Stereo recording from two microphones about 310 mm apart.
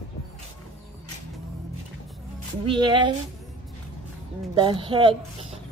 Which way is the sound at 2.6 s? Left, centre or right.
Centre.